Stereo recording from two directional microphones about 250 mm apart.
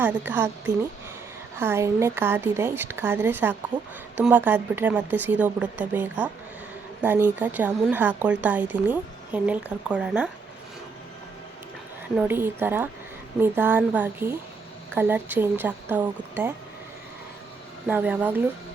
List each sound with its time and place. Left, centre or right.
0.0 s a woman's voice: centre
12.1 s a woman's voice: centre
17.8 s a woman's voice: centre